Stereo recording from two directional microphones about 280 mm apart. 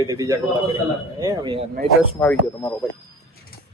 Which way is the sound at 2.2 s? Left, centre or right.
Centre.